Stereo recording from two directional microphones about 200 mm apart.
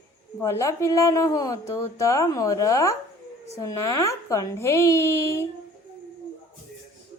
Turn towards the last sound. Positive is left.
turn(degrees=15)  # may be behind; listen again after turning